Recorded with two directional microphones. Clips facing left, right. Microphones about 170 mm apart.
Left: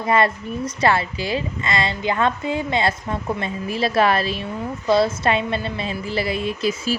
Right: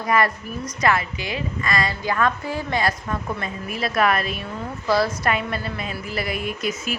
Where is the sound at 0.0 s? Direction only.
25° left (ahead or behind).